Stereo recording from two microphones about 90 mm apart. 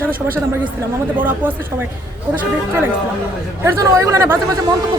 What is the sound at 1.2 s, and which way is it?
A woman's voice, 20° right (ahead or behind).